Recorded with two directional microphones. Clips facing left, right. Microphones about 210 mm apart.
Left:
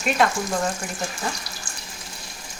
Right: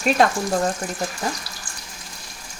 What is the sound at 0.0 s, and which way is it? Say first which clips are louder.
Speech: right 3 dB; 40° right (ahead or behind).